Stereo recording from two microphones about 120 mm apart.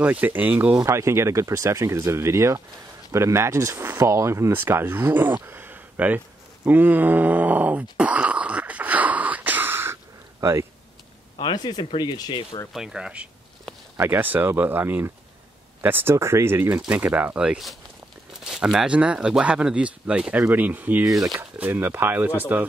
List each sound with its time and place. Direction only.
0.0 s speech: 15° right (ahead or behind)
3.1 s a sound: 25° right (ahead or behind)
10.4 s speech: 25° right (ahead or behind)
11.3 s speech: 40° left (ahead or behind)
12.7 s speech: 5° right (ahead or behind)